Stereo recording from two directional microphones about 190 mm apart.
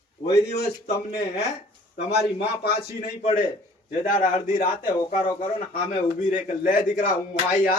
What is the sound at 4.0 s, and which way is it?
Speech, 40° left (ahead or behind).